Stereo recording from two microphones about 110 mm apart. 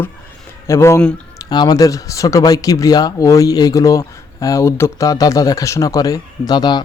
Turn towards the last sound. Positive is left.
turn(degrees=40)  # may be behind; listen again after turning